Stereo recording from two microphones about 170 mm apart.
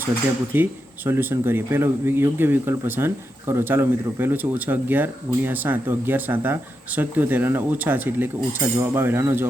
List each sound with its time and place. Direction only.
0.5 s speech: 10° right (ahead or behind)